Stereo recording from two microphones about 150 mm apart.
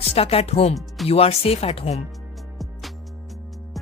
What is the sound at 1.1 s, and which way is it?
Speech, 40° left (ahead or behind).